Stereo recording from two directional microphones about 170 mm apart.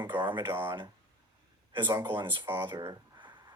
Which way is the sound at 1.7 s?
25° right (ahead or behind).